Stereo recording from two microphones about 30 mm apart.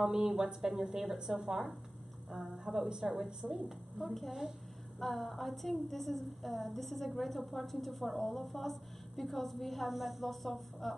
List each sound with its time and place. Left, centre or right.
0.0 s a woman's voice: centre
1.3 s speech: centre
4.0 s a woman's voice: centre
4.3 s speech: centre
5.0 s a woman's voice: centre